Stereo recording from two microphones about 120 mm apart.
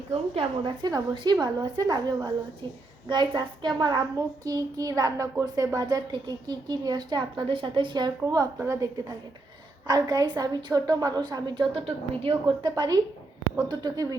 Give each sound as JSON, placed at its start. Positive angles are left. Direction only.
{"t": 0.1, "sound": "a woman's voice", "side_deg": -55}
{"t": 0.8, "sound": "a child's voice", "side_deg": -30}
{"t": 8.5, "sound": "a woman's voice", "side_deg": -25}
{"t": 11.7, "sound": "a woman's voice", "side_deg": -55}
{"t": 12.6, "sound": "a child's voice", "side_deg": -35}